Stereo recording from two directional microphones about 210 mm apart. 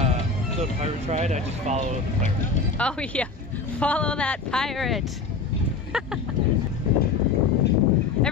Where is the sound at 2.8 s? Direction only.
5° left (ahead or behind).